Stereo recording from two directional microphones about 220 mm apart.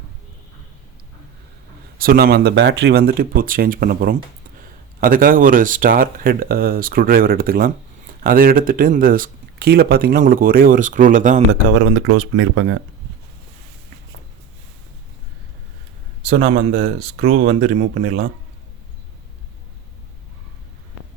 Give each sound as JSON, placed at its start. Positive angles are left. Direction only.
{"t": 2.0, "sound": "speech", "side_deg": -40}
{"t": 11.8, "sound": "speech", "side_deg": -60}
{"t": 16.3, "sound": "speech", "side_deg": -30}
{"t": 16.6, "sound": "speech", "side_deg": -40}